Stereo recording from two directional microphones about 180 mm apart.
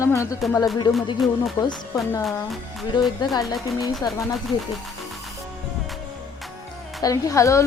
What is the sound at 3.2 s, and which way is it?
Speech, 25° left (ahead or behind).